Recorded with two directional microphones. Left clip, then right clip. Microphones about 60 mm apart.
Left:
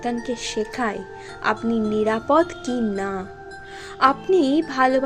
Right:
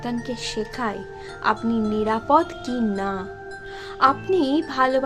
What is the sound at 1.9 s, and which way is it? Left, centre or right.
Speech, left.